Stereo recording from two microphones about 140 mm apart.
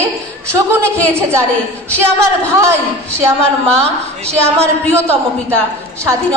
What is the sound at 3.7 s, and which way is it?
Speech, 50° right (ahead or behind).